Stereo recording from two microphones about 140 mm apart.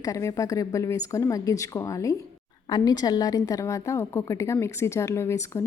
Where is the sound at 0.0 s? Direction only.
25° left (ahead or behind).